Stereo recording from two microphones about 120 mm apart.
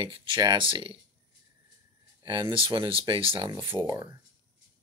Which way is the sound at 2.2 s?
45° right (ahead or behind).